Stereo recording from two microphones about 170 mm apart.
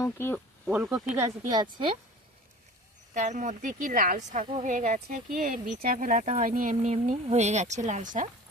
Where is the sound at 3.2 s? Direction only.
50° right (ahead or behind).